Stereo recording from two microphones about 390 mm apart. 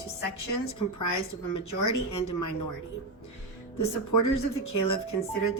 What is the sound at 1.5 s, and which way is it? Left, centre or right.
Speech, left.